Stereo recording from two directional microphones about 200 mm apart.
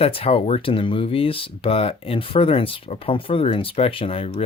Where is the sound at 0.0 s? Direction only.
30° left (ahead or behind).